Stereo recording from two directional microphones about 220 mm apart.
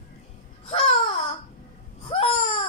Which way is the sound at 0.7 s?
25° left (ahead or behind).